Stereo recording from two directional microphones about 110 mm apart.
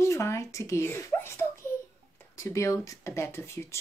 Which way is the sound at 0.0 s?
25° left (ahead or behind).